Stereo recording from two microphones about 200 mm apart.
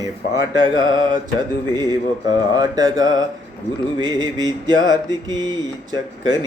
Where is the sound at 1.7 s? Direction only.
20° right (ahead or behind).